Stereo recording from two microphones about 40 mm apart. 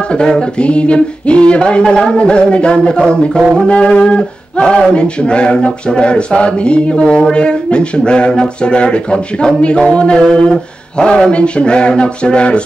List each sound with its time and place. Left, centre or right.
0.4 s male singing: left